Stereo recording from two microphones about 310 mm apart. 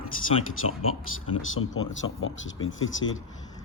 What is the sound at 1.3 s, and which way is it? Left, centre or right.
Speech, left.